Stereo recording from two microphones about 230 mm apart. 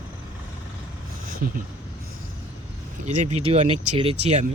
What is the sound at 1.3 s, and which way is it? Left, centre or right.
Speech, right.